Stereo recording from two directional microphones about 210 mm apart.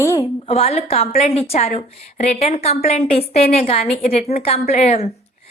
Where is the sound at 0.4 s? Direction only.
30° left (ahead or behind).